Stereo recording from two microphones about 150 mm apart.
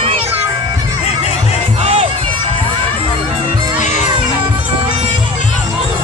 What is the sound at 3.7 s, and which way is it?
Music, 50° left (ahead or behind).